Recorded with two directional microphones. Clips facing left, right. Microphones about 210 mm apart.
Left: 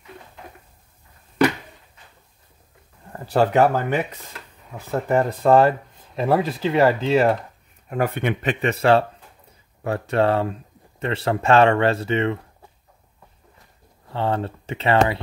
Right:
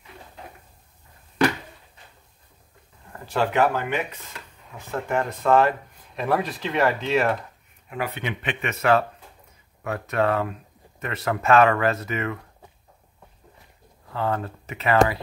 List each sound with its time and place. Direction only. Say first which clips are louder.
3.1 s speech: left 5 dB; 40° left (ahead or behind)
7.9 s speech: left 7 dB; 50° left (ahead or behind); by 12.4 s 30° left (ahead or behind)
14.1 s speech: left 3 dB; 30° left (ahead or behind)